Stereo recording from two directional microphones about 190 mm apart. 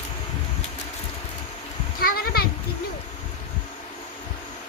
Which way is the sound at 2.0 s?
50° left (ahead or behind).